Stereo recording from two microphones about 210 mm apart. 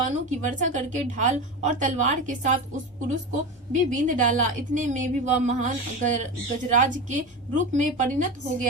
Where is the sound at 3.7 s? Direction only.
35° right (ahead or behind).